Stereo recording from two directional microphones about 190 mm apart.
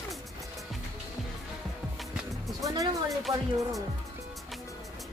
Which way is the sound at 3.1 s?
Centre (ahead or behind).